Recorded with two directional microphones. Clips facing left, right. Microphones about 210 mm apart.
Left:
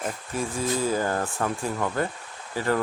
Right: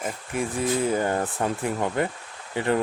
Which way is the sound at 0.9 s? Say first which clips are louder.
Right 1 dB; 25° right (ahead or behind).